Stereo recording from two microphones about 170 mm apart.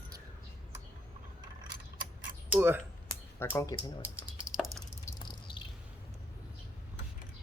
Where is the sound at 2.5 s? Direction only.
10° right (ahead or behind).